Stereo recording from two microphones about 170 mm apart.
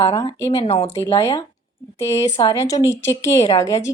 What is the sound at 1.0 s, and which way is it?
A woman's voice, 20° left (ahead or behind).